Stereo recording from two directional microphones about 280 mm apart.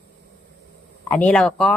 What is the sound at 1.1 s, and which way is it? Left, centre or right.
Speech, centre.